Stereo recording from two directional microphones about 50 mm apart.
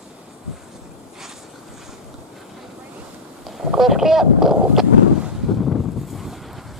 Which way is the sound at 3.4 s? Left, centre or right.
Centre.